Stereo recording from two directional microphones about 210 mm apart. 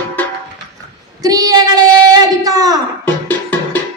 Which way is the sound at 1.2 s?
15° right (ahead or behind).